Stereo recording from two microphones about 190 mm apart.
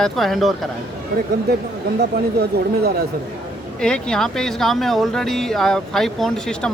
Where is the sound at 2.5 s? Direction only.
60° right (ahead or behind).